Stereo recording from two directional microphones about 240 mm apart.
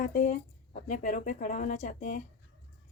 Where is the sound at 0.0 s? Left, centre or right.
Left.